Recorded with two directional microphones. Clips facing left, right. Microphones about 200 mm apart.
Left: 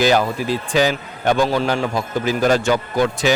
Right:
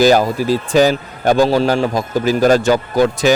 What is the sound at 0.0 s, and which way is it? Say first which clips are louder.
Speech: right 5 dB; 40° right (ahead or behind).